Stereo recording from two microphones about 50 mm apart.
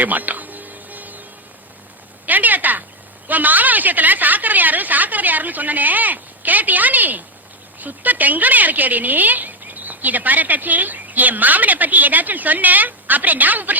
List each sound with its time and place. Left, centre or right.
0.0 s music: right
2.2 s a sound: right
3.2 s a woman's voice: right